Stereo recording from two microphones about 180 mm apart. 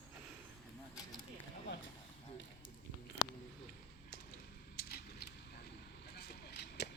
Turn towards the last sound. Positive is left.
turn(degrees=65)  # may be behind; listen again after turning